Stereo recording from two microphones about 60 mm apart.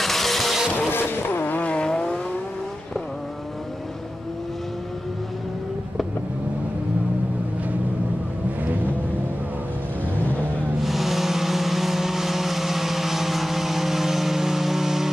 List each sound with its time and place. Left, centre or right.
0.0 s vehicle: centre
0.7 s vehicle: left; by 2.1 s centre
10.8 s vehicle: centre